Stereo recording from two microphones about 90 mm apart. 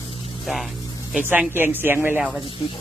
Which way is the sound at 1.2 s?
20° right (ahead or behind).